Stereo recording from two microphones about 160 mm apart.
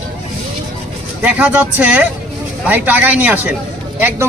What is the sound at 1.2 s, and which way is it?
Speech, 10° right (ahead or behind).